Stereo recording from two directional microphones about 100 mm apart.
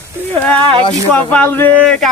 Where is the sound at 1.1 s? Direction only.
20° left (ahead or behind).